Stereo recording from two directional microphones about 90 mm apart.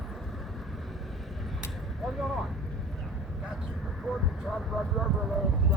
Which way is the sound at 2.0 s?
Centre (ahead or behind).